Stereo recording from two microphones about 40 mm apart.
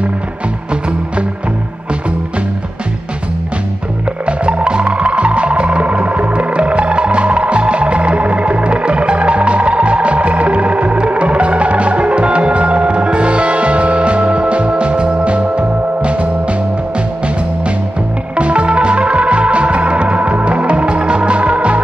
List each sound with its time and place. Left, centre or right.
4.3 s music: right
18.3 s music: right